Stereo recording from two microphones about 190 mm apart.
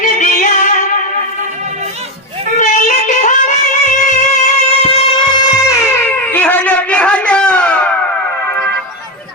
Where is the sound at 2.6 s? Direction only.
40° left (ahead or behind).